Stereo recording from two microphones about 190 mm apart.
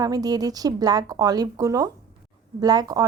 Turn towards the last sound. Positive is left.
turn(degrees=-20)  # may be behind; listen again after turning